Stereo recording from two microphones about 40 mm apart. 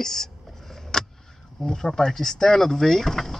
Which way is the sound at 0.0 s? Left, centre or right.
Centre.